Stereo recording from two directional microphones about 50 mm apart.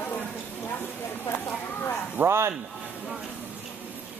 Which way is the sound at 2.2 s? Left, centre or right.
Right.